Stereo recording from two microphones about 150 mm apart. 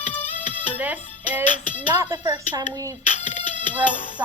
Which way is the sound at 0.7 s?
10° right (ahead or behind).